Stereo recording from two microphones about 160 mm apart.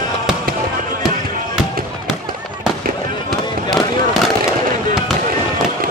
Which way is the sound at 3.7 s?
Centre (ahead or behind).